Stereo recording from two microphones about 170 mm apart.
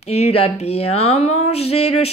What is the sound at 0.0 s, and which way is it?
Speech, 40° left (ahead or behind).